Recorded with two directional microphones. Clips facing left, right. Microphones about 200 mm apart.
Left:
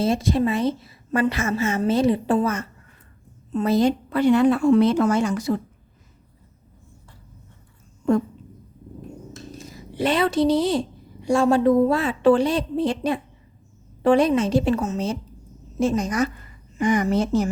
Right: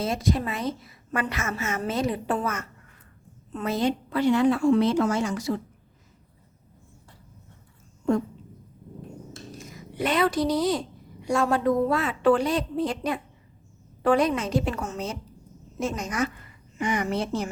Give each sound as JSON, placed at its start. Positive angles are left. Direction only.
{"t": 0.0, "sound": "a woman's voice", "side_deg": 30}
{"t": 9.6, "sound": "a woman's voice", "side_deg": 30}